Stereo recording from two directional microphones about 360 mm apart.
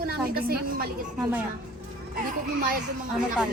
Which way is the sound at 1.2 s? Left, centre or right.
Centre.